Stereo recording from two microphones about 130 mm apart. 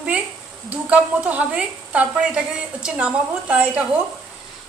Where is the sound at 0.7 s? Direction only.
10° right (ahead or behind).